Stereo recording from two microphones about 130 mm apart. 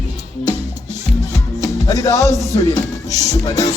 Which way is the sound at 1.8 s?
25° left (ahead or behind).